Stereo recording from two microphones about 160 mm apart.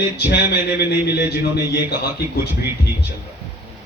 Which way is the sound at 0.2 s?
90° left.